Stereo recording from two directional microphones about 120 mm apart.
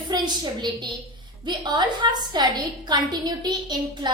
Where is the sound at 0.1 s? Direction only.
30° right (ahead or behind).